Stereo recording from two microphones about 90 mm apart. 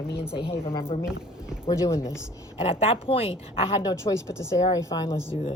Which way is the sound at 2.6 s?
90° left.